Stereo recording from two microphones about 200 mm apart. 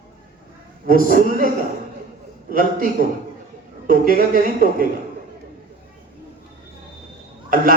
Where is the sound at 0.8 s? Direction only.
45° right (ahead or behind).